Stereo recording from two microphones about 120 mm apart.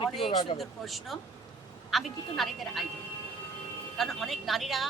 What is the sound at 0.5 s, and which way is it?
Speech, centre (ahead or behind).